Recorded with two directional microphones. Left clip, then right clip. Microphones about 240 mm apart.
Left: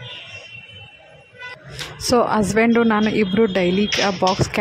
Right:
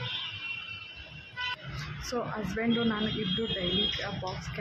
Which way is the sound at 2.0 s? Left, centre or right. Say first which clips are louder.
Left 18 dB; left.